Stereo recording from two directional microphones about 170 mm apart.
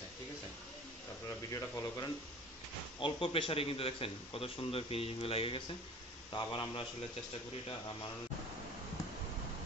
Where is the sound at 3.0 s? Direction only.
30° left (ahead or behind).